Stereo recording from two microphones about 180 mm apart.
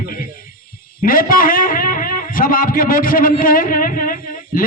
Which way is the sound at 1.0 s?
50° left (ahead or behind).